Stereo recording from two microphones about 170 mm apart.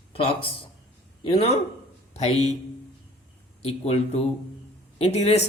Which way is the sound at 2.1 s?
40° left (ahead or behind).